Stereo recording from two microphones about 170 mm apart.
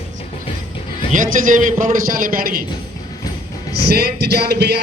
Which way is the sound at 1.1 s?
50° right (ahead or behind).